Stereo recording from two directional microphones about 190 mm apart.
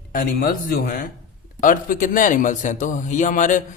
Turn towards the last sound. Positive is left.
turn(degrees=40)  # may be behind; listen again after turning